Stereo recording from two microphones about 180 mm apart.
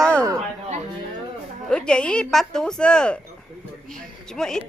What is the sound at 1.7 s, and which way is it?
A woman's voice, 5° left (ahead or behind).